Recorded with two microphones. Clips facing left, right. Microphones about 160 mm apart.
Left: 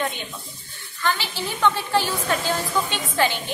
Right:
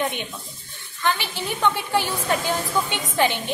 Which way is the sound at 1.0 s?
15° right (ahead or behind).